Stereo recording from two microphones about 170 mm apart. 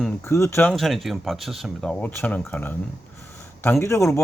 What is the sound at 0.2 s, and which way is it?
Speech, 15° left (ahead or behind).